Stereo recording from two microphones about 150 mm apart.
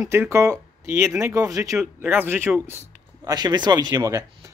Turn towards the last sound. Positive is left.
turn(degrees=-20)  # may be behind; listen again after turning